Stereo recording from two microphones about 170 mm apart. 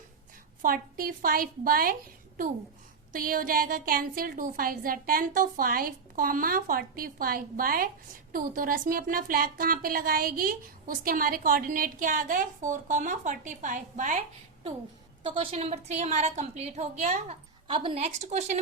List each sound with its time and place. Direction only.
0.6 s speech: 55° right (ahead or behind)
3.1 s a woman's voice: 55° right (ahead or behind)
17.7 s a woman's voice: 30° right (ahead or behind)